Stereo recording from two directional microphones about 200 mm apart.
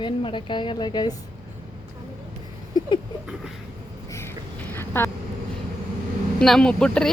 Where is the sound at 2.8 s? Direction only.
20° left (ahead or behind).